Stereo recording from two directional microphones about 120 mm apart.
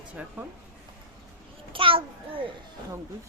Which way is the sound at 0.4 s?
15° right (ahead or behind).